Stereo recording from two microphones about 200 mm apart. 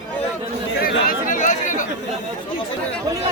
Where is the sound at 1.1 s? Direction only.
40° left (ahead or behind).